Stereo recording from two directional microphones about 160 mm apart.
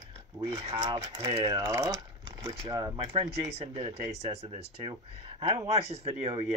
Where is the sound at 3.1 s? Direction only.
40° right (ahead or behind).